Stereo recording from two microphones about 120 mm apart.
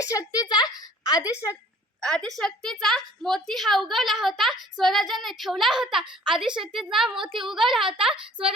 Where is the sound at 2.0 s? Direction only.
5° left (ahead or behind).